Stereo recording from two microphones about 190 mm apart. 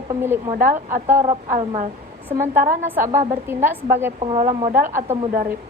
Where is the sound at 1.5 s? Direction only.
35° right (ahead or behind).